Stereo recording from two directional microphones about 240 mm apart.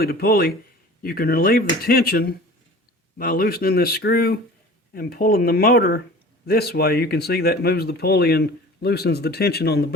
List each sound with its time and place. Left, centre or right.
0.0 s speech: left